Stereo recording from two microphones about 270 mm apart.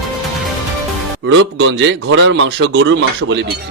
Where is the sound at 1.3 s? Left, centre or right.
Right.